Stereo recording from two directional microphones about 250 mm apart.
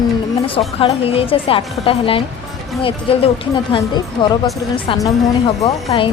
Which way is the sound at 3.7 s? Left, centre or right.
Centre.